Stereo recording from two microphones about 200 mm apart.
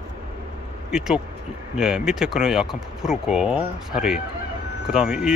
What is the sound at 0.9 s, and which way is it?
Speech, 5° right (ahead or behind).